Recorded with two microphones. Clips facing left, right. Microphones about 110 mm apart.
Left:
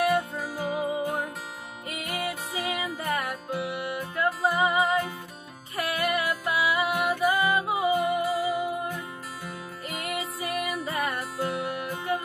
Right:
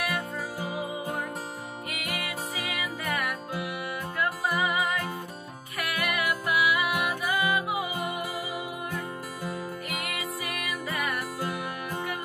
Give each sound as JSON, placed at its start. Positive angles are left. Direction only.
{"t": 2.5, "sound": "music", "side_deg": 30}
{"t": 10.0, "sound": "music", "side_deg": 25}